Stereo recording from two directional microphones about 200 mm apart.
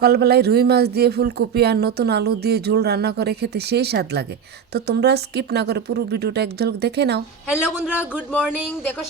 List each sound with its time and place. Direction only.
0.0 s speech: 55° right (ahead or behind)
7.4 s speech: 5° right (ahead or behind)